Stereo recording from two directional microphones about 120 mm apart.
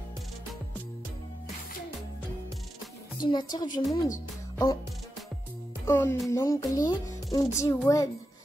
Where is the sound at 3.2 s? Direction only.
35° left (ahead or behind).